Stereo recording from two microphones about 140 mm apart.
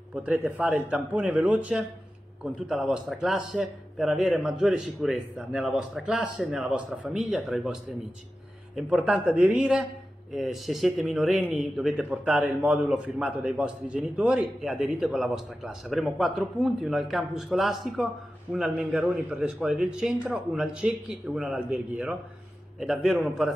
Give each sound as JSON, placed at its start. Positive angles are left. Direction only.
{"t": 0.1, "sound": "a man's voice", "side_deg": -10}